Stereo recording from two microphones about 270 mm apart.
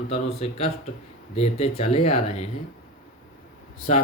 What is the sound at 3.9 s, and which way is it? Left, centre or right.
Speech, left.